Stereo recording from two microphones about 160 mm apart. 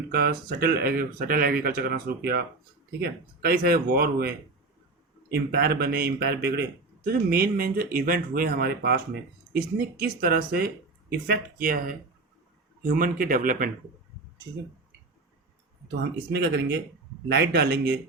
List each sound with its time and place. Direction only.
0.1 s a man's voice: 65° right (ahead or behind)
16.3 s speech: 90° right